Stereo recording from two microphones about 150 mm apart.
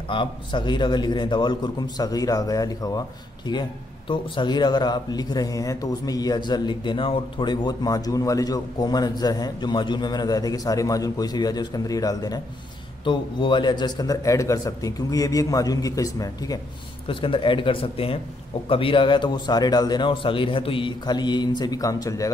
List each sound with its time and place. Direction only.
0.1 s speech: 35° left (ahead or behind)
4.1 s speech: 30° left (ahead or behind)
17.1 s speech: 35° left (ahead or behind)